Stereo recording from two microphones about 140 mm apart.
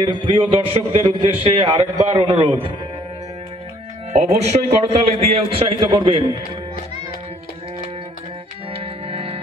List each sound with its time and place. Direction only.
0.0 s a man's voice: 35° right (ahead or behind)
4.1 s a man's voice: 55° right (ahead or behind); by 6.2 s 35° right (ahead or behind)
8.7 s organ: 40° right (ahead or behind)